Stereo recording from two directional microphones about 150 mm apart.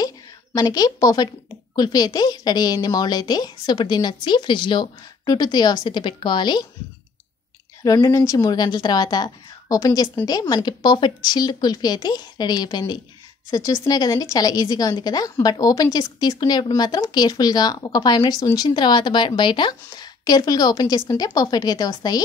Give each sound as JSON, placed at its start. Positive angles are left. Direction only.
{"t": 0.6, "sound": "a woman's voice", "side_deg": 25}
{"t": 7.8, "sound": "a woman's voice", "side_deg": 25}